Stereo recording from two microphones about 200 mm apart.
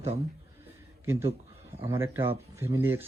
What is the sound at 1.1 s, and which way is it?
Speech, 10° right (ahead or behind).